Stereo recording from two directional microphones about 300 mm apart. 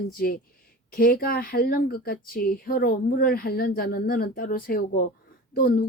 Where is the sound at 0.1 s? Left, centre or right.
Left.